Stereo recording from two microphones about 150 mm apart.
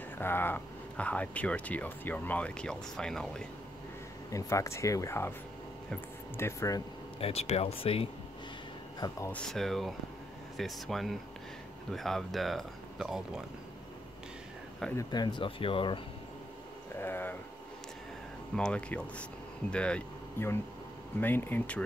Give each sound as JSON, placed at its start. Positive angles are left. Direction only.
{"t": 0.2, "sound": "speech", "side_deg": 15}
{"t": 4.3, "sound": "speech", "side_deg": 20}
{"t": 6.3, "sound": "speech", "side_deg": 20}
{"t": 7.2, "sound": "speech", "side_deg": 40}
{"t": 9.3, "sound": "speech", "side_deg": 5}
{"t": 15.0, "sound": "speech", "side_deg": 30}
{"t": 17.0, "sound": "a sound", "side_deg": 15}
{"t": 18.6, "sound": "speech", "side_deg": 5}